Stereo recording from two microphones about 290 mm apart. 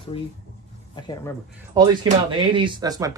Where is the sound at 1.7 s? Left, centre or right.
Centre.